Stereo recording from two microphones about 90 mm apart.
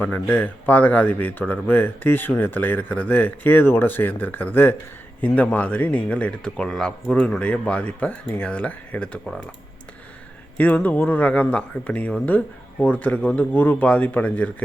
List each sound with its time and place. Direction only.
0.0 s speech: 20° left (ahead or behind)
10.6 s speech: 15° left (ahead or behind)